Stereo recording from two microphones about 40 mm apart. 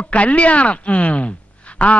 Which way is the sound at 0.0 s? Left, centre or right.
Left.